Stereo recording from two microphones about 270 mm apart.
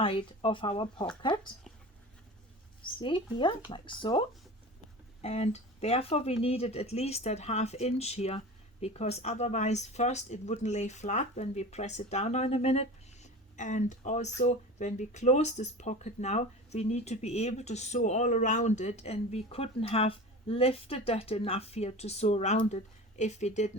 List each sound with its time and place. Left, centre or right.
0.0 s speech: centre
3.0 s speech: centre